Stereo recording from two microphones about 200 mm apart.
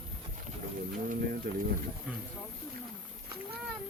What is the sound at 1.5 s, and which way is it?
Speech, 55° right (ahead or behind).